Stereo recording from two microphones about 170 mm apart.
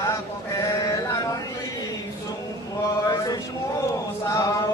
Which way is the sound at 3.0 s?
20° left (ahead or behind).